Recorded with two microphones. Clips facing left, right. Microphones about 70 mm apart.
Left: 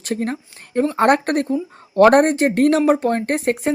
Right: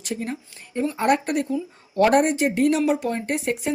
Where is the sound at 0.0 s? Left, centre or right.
Left.